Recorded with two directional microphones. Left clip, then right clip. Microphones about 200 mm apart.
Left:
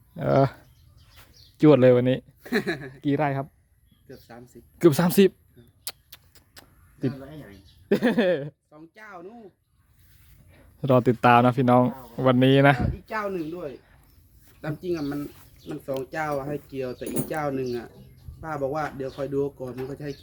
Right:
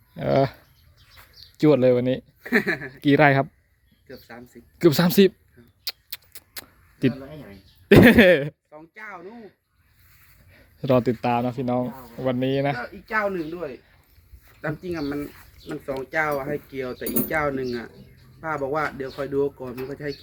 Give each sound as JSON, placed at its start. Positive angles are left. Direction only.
{"t": 0.1, "sound": "speech", "side_deg": 10}
{"t": 2.4, "sound": "speech", "side_deg": 25}
{"t": 3.0, "sound": "speech", "side_deg": -20}
{"t": 4.1, "sound": "a sound", "side_deg": 25}
{"t": 4.8, "sound": "speech", "side_deg": 5}
{"t": 6.1, "sound": "a sound", "side_deg": -15}
{"t": 7.1, "sound": "a man's voice", "side_deg": -35}
{"t": 7.9, "sound": "speech", "side_deg": -15}
{"t": 8.7, "sound": "speech", "side_deg": 35}
{"t": 9.2, "sound": "speech", "side_deg": -10}
{"t": 10.8, "sound": "a sound", "side_deg": 10}
{"t": 14.8, "sound": "speech", "side_deg": 40}
{"t": 16.1, "sound": "a sound", "side_deg": 25}